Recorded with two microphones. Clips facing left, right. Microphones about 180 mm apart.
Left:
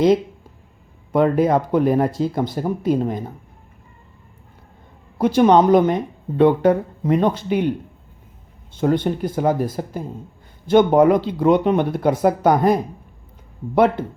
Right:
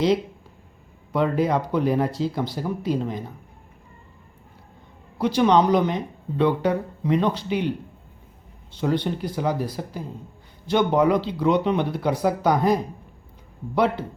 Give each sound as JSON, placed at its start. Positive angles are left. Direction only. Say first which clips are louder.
{"t": 1.1, "sound": "speech", "louder": "left 5 dB", "side_deg": 50}
{"t": 5.1, "sound": "speech", "louder": "left 5 dB", "side_deg": 50}
{"t": 8.7, "sound": "speech", "louder": "left 5 dB", "side_deg": 50}